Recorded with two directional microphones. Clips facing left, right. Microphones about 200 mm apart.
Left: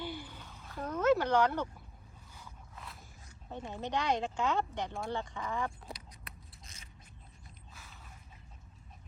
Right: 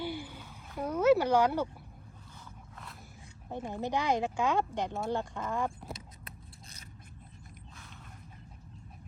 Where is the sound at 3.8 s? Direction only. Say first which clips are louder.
Right 2 dB; 10° right (ahead or behind).